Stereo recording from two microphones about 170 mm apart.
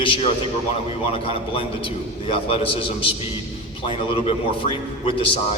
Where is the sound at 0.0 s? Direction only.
30° left (ahead or behind).